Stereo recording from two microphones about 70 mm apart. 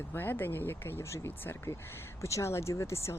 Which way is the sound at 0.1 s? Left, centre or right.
Left.